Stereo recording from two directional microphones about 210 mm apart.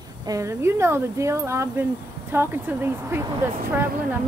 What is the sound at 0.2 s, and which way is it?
Speech, 15° right (ahead or behind).